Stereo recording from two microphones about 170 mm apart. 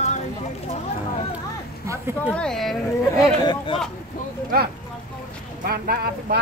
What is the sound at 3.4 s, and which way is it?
Speech, 30° left (ahead or behind).